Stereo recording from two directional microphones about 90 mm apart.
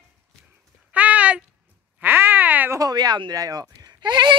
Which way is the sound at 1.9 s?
25° right (ahead or behind).